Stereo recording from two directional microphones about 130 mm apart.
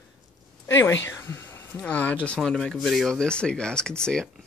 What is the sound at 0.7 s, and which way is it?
Speech, 20° left (ahead or behind).